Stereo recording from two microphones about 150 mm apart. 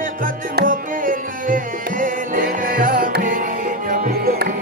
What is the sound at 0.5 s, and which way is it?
Music, 65° right (ahead or behind).